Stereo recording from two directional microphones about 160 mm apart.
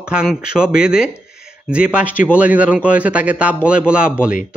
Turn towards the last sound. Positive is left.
turn(degrees=-5)  # may be behind; listen again after turning